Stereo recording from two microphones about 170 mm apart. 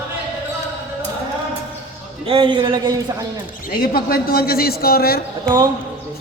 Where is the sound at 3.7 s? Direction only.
60° left (ahead or behind).